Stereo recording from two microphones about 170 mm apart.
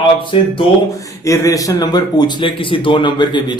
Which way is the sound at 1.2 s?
20° left (ahead or behind).